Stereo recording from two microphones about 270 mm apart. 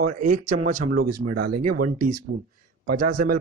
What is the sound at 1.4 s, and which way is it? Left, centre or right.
Speech, right.